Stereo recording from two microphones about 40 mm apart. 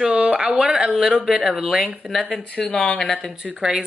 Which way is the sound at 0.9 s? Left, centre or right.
Centre.